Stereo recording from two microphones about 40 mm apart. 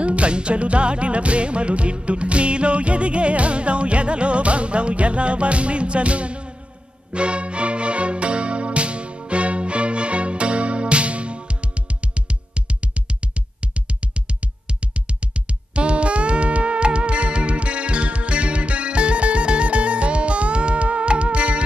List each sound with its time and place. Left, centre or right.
0.0 s music: right